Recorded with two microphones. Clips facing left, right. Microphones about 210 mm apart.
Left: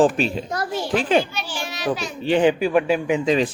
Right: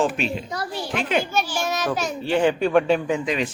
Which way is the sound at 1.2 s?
45° right (ahead or behind).